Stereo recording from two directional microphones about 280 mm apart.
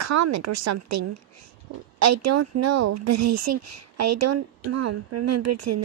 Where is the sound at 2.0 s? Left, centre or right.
Right.